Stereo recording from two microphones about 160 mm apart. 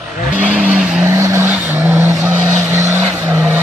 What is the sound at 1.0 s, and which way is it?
Vehicle, 15° right (ahead or behind).